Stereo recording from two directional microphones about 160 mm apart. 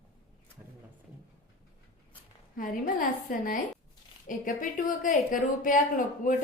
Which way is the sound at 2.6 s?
60° left (ahead or behind).